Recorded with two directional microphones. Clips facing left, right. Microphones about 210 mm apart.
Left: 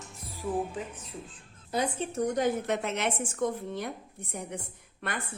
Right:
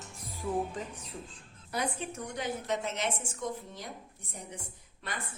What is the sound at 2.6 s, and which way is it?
A woman's voice, 60° left (ahead or behind).